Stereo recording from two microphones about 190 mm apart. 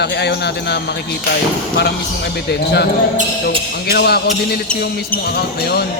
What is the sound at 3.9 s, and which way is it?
Speech, 60° left (ahead or behind).